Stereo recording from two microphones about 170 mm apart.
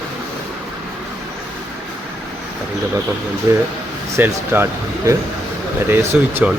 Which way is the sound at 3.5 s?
20° right (ahead or behind).